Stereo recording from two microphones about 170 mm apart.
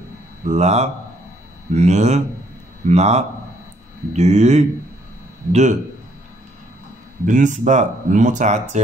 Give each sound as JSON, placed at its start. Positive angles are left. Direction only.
{"t": 0.5, "sound": "speech", "side_deg": -40}
{"t": 7.2, "sound": "speech", "side_deg": -50}